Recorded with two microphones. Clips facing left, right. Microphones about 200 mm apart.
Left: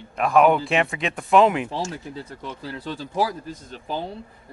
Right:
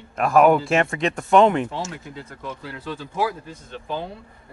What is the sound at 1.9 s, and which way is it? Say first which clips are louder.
Speech: left 2 dB; 35° left (ahead or behind).